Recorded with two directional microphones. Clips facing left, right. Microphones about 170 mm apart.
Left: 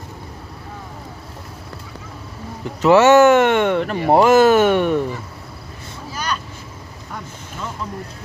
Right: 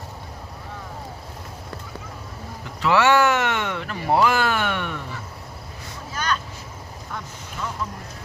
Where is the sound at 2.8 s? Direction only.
45° left (ahead or behind).